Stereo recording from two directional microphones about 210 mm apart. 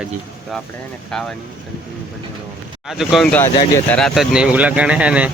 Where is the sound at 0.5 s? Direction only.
Centre (ahead or behind).